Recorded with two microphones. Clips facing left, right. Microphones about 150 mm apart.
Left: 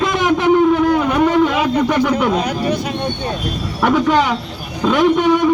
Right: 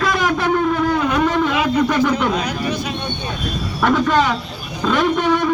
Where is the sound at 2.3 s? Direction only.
50° left (ahead or behind).